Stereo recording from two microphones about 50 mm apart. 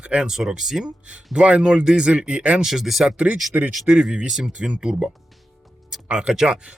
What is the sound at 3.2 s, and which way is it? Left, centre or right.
Speech, right.